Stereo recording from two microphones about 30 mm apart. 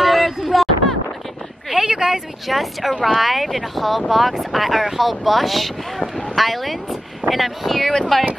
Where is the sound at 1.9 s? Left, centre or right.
Centre.